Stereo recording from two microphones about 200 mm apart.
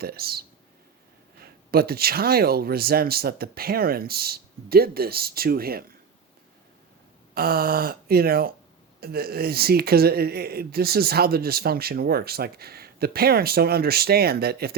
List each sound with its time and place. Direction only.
0.0 s speech: 50° right (ahead or behind)
7.3 s speech: 50° right (ahead or behind)